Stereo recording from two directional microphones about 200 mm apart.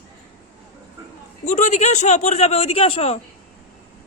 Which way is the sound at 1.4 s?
35° left (ahead or behind).